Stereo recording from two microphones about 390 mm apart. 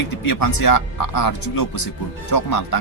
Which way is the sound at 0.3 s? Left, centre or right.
Left.